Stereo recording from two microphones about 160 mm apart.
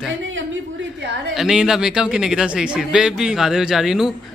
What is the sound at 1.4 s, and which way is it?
Speech, 5° right (ahead or behind).